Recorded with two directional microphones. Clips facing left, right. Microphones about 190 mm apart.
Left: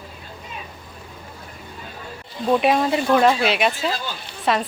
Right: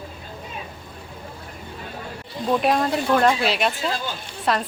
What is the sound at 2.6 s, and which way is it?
A woman's voice, 5° left (ahead or behind).